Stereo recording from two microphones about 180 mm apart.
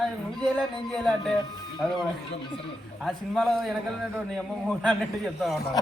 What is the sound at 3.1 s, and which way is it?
Speech, centre (ahead or behind).